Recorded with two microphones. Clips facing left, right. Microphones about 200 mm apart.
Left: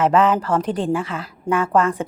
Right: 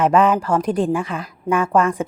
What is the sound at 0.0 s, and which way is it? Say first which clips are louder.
A woman's voice: right 1 dB; 15° right (ahead or behind).